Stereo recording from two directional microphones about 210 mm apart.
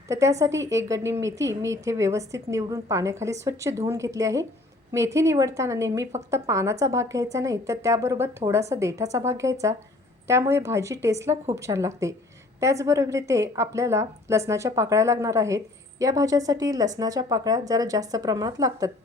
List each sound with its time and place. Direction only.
0.1 s a woman's voice: 15° right (ahead or behind)